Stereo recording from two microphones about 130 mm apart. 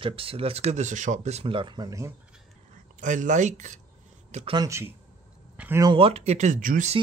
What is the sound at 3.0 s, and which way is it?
Speech, 70° right (ahead or behind).